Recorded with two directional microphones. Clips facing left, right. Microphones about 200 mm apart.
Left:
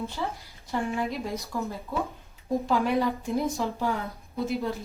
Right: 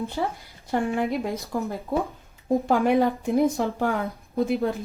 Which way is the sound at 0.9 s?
50° right (ahead or behind).